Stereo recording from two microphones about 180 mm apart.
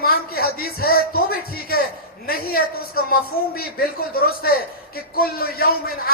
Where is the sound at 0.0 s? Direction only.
55° left (ahead or behind).